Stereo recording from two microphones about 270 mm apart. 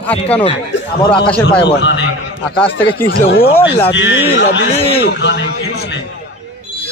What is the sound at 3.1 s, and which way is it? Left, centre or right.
A man's voice, left.